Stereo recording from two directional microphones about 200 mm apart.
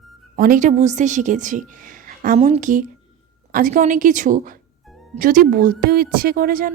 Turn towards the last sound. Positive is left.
turn(degrees=-45)  # may be behind; listen again after turning